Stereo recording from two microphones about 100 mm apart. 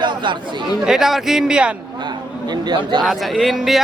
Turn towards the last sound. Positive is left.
turn(degrees=0)  # may be behind; listen again after turning